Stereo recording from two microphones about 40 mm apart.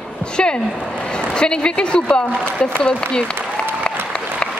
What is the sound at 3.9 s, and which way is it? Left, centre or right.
Applause, left.